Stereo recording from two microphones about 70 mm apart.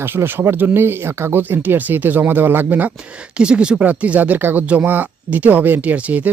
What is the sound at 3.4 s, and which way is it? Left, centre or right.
Speech, centre.